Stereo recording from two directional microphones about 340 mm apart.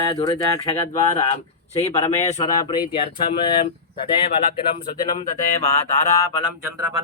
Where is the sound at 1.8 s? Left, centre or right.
Centre.